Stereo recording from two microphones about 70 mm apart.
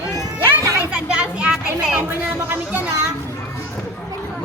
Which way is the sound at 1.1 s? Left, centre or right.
Centre.